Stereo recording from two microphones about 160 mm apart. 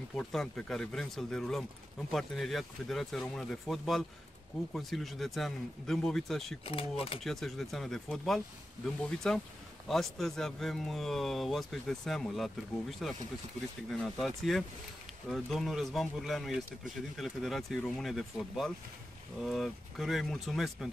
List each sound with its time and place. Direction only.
0.1 s speech: 5° left (ahead or behind)
6.6 s speech: 35° left (ahead or behind)
7.2 s speech: centre (ahead or behind)